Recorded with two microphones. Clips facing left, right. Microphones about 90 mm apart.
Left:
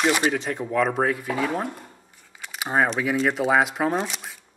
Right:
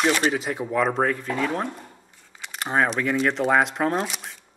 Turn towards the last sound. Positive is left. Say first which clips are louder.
# even
turn(degrees=0)  # may be behind; listen again after turning